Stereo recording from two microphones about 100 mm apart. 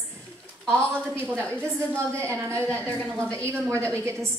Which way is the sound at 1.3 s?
10° left (ahead or behind).